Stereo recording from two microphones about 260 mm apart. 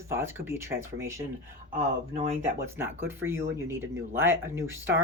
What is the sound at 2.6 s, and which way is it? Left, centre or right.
Speech, centre.